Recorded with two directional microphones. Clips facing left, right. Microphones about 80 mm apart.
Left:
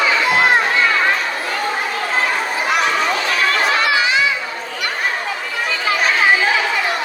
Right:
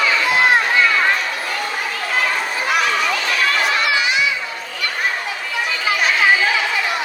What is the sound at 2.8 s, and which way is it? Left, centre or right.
Chatter, left.